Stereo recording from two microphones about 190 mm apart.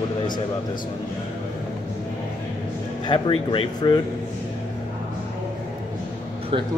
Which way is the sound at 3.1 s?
25° left (ahead or behind).